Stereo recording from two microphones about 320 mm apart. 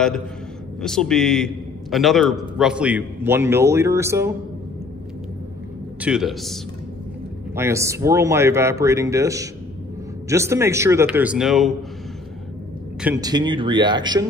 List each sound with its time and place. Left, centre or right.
0.7 s a man's voice: centre
5.9 s a man's voice: centre
13.2 s speech: centre